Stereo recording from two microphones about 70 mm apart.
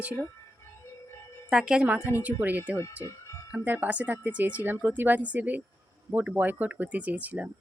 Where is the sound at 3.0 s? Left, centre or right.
Left.